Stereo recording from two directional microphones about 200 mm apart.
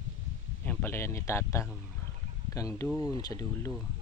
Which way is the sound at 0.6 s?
10° left (ahead or behind).